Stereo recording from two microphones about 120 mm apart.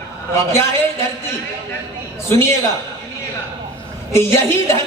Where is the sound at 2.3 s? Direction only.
20° left (ahead or behind).